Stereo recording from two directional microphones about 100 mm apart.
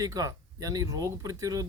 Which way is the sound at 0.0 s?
35° right (ahead or behind).